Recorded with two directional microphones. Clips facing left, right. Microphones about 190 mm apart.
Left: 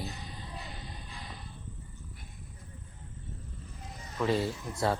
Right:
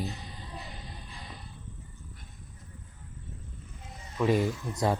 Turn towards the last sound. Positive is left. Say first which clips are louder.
# right 2 dB
turn(degrees=-15)  # may be behind; listen again after turning